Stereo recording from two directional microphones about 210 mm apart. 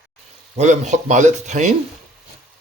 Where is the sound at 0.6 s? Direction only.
35° right (ahead or behind).